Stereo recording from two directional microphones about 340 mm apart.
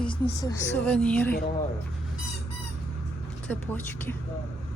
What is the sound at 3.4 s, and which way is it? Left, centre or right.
Speech, centre.